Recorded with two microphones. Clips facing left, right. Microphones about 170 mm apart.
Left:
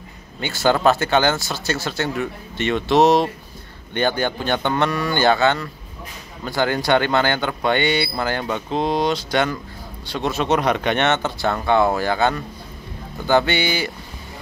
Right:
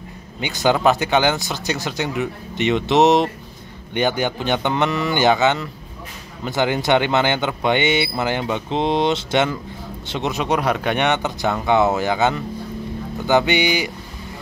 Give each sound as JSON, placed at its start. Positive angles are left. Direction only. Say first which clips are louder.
{"t": 0.4, "sound": "speech", "louder": "even", "side_deg": -15}